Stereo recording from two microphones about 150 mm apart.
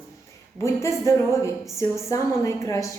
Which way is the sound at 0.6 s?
20° left (ahead or behind).